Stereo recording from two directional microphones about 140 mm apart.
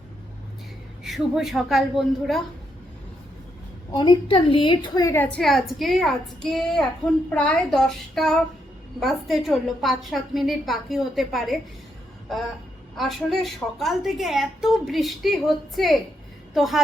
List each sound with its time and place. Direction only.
1.0 s a woman's voice: centre (ahead or behind)
3.9 s a woman's voice: 30° left (ahead or behind)
5.4 s a woman's voice: centre (ahead or behind)
13.0 s a woman's voice: centre (ahead or behind)